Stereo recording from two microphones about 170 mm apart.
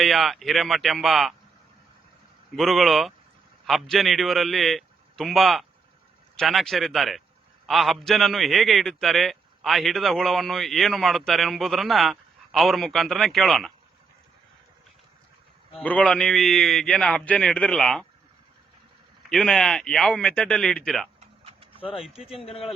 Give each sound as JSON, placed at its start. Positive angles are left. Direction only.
{"t": 0.0, "sound": "a man's voice", "side_deg": 0}
{"t": 2.6, "sound": "a man's voice", "side_deg": 0}
{"t": 15.8, "sound": "a man's voice", "side_deg": 10}
{"t": 19.3, "sound": "a man's voice", "side_deg": 5}
{"t": 21.2, "sound": "a sound", "side_deg": -35}
{"t": 22.2, "sound": "a man's voice", "side_deg": 0}
{"t": 22.4, "sound": "speech", "side_deg": 35}